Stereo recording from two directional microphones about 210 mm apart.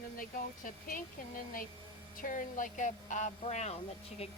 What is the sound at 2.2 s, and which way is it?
Speech, 40° left (ahead or behind).